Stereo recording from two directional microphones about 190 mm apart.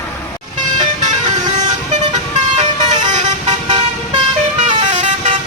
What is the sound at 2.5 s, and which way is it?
Vehicle, 40° right (ahead or behind).